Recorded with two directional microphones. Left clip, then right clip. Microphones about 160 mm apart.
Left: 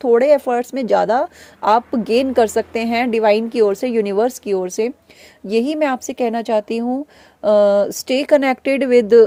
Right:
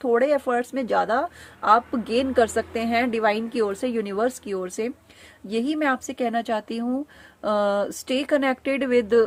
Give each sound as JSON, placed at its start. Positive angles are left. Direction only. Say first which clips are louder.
{"t": 0.0, "sound": "speech", "louder": "left 8 dB", "side_deg": 40}